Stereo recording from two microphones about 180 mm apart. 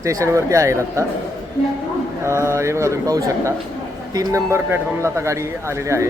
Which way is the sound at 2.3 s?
15° right (ahead or behind).